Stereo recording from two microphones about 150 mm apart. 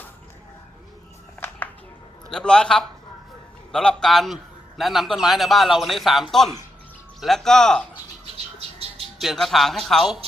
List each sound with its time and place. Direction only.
1.4 s a sound: 10° left (ahead or behind)
2.3 s a man's voice: 5° left (ahead or behind)
8.8 s bird: 45° right (ahead or behind)
9.2 s a man's voice: centre (ahead or behind)